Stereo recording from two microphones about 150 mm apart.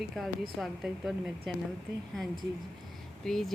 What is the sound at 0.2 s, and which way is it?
Speech, 5° left (ahead or behind).